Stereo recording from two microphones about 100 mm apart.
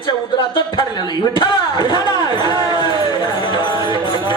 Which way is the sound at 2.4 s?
40° right (ahead or behind).